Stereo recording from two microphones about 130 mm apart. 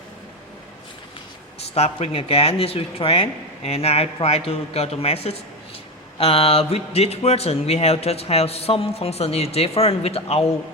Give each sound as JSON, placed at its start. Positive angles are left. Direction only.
{"t": 1.7, "sound": "speech", "side_deg": 50}